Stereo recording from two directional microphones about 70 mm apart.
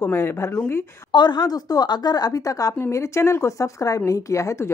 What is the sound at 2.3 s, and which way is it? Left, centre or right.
Speech, left.